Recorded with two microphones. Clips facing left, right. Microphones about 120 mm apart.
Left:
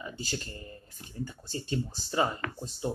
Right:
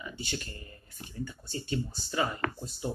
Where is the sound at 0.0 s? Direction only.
35° left (ahead or behind).